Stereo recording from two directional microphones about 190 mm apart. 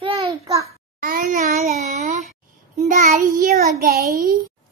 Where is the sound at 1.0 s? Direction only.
45° right (ahead or behind).